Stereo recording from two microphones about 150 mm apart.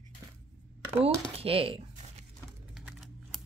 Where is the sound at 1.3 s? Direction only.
40° right (ahead or behind).